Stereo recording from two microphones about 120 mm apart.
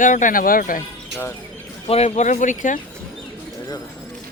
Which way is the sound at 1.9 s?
65° left (ahead or behind).